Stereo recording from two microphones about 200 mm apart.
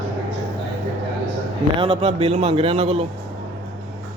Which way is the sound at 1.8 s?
30° right (ahead or behind).